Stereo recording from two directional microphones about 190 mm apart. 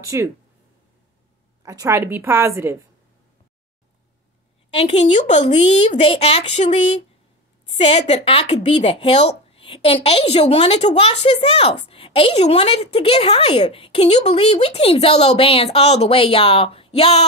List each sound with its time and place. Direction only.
0.0 s a woman's voice: 15° right (ahead or behind)
1.6 s a woman's voice: 15° right (ahead or behind)
4.7 s a woman's voice: 35° left (ahead or behind)